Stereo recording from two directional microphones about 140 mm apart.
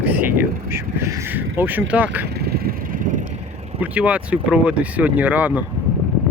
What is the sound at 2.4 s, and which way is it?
Vehicle, 90° right.